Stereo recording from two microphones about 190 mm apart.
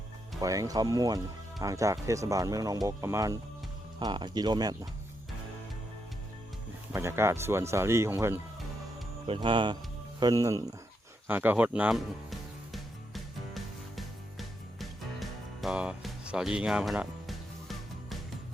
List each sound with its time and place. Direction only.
0.3 s speech: 20° right (ahead or behind)
6.9 s speech: 15° right (ahead or behind)
9.2 s speech: 25° right (ahead or behind)
11.3 s music: 10° right (ahead or behind)